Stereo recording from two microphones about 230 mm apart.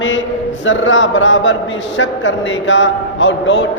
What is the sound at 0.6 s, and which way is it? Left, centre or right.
A man's voice, left.